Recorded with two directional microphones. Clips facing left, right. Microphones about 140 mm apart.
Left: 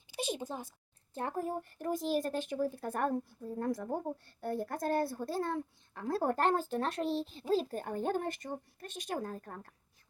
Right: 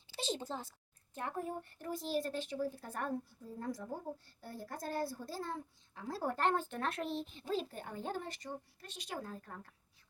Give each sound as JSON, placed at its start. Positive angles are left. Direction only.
{"t": 0.1, "sound": "a sound", "side_deg": 15}
{"t": 1.1, "sound": "speech", "side_deg": 35}
{"t": 1.8, "sound": "speech", "side_deg": 50}